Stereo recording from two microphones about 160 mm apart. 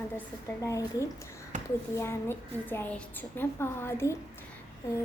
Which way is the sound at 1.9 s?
15° left (ahead or behind).